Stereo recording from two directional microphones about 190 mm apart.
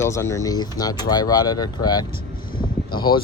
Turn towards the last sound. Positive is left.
turn(degrees=25)  # may be behind; listen again after turning